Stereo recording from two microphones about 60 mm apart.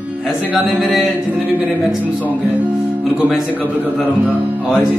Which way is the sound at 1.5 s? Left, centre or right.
Right.